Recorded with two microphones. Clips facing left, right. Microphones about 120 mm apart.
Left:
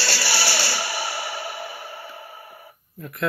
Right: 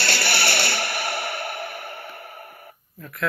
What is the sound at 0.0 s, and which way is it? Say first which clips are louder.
Music: right 1 dB; 55° right (ahead or behind).